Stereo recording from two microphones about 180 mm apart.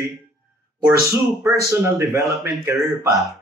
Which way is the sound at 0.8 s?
15° right (ahead or behind).